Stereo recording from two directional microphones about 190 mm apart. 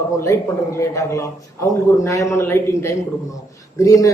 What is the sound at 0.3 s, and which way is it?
A man's voice, 15° left (ahead or behind).